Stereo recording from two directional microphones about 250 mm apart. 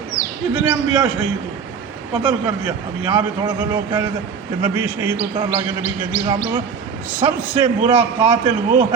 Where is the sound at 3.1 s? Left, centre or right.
Centre.